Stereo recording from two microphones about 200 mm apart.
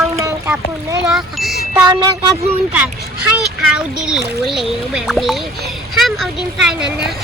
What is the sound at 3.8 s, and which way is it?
Speech, 5° right (ahead or behind).